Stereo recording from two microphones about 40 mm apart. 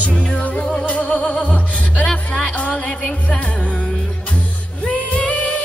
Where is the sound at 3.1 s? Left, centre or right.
Left.